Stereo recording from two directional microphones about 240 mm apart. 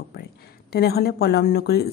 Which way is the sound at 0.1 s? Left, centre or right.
Left.